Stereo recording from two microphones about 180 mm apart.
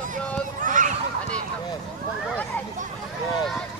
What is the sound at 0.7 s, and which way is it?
Honk, 45° right (ahead or behind).